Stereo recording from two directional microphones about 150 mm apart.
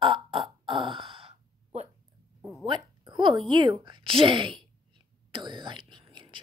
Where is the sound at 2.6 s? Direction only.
30° right (ahead or behind).